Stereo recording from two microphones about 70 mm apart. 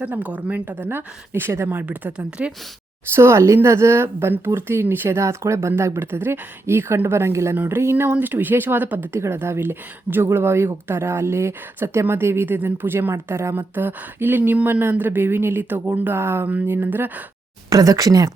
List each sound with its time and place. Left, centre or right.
0.0 s speech: right
3.1 s a woman's voice: right
7.5 s speech: right
7.8 s a woman's voice: right
16.5 s a woman's voice: right
17.7 s speech: right